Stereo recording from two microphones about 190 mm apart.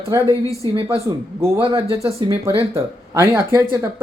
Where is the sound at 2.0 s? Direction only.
15° right (ahead or behind).